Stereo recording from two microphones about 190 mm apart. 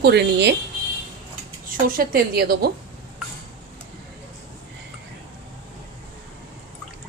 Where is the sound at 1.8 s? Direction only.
50° right (ahead or behind).